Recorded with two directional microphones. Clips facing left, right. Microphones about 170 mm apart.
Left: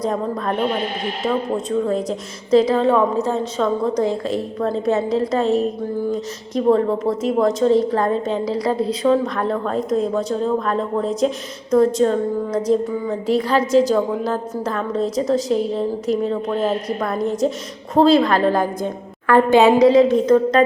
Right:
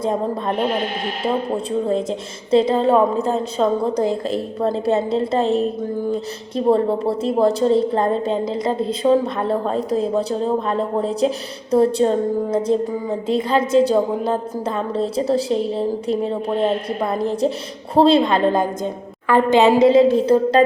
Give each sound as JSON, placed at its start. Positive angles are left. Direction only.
{"t": 0.0, "sound": "a woman's voice", "side_deg": -25}
{"t": 9.7, "sound": "speech", "side_deg": 0}
{"t": 10.2, "sound": "a woman's voice", "side_deg": -30}